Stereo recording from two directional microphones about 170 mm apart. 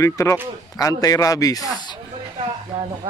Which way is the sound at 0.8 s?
20° left (ahead or behind).